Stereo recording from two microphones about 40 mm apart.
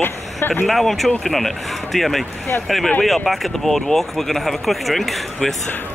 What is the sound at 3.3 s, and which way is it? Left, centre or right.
Speech, centre.